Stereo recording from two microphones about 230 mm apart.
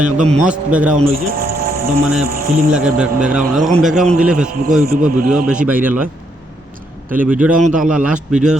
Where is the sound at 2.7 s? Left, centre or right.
Centre.